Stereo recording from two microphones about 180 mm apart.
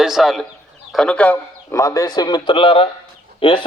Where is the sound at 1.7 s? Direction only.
20° left (ahead or behind).